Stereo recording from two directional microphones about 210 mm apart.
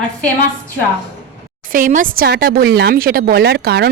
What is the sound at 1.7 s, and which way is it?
Speech, 40° right (ahead or behind).